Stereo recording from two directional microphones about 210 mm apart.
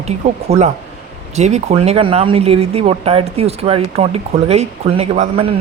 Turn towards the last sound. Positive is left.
turn(degrees=-30)  # may be behind; listen again after turning